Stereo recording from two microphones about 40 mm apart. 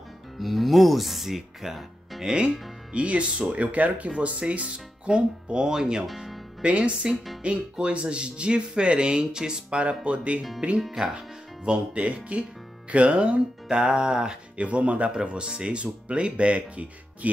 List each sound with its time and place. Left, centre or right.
0.4 s speech: centre
2.9 s speech: right
6.0 s speech: centre
6.6 s speech: right
9.8 s speech: right
14.6 s speech: right